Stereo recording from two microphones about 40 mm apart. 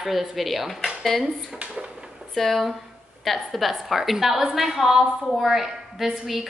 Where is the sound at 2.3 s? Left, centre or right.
Centre.